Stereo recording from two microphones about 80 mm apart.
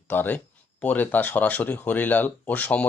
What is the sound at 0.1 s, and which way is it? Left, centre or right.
Speech, left.